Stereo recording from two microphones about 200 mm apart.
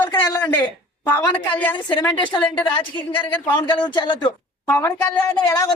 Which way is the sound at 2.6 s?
25° left (ahead or behind).